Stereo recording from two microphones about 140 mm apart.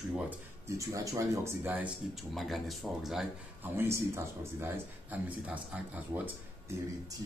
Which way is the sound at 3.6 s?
15° right (ahead or behind).